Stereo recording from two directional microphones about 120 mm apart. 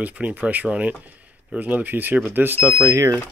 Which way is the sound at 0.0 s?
10° right (ahead or behind).